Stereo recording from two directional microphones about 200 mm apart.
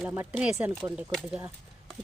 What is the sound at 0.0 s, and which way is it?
Speech, 10° right (ahead or behind).